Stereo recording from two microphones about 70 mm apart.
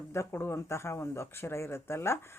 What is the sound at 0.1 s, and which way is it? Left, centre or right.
Speech, left.